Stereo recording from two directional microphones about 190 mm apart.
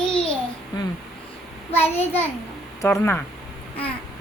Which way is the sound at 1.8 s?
10° left (ahead or behind).